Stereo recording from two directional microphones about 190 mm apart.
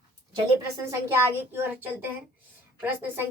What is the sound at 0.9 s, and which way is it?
A child's voice, 15° right (ahead or behind).